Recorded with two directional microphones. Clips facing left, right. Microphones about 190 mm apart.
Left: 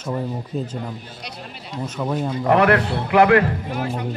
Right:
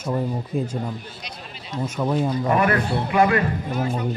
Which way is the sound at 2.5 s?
75° left (ahead or behind).